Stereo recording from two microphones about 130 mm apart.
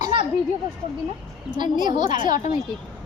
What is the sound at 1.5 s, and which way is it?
Speech, 35° right (ahead or behind).